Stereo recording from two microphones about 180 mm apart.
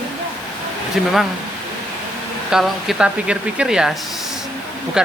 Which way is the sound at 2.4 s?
Centre (ahead or behind).